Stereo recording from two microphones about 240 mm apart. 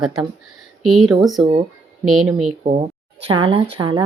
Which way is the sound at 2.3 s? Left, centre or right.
Right.